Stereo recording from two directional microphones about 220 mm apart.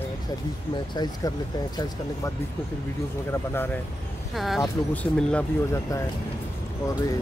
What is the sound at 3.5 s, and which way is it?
Speech, 10° left (ahead or behind).